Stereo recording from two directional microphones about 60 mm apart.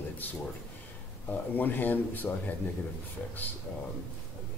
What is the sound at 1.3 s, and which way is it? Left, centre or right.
Speech, left.